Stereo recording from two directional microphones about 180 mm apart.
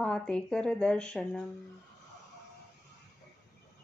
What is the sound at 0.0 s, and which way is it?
Speech, 5° left (ahead or behind).